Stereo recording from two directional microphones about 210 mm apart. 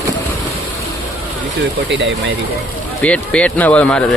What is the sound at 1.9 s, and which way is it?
Speech, 60° right (ahead or behind).